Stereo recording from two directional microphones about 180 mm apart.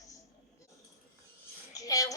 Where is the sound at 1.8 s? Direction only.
20° left (ahead or behind).